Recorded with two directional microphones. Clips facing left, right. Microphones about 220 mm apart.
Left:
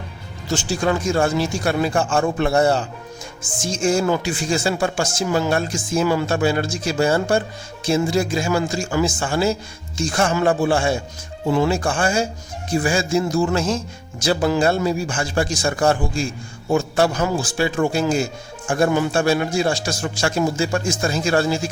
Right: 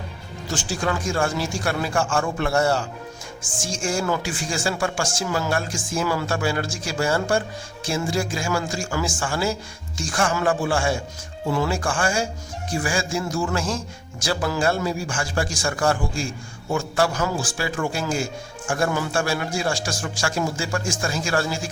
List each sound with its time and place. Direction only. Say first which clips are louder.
0.5 s speech: left 5 dB; 25° left (ahead or behind)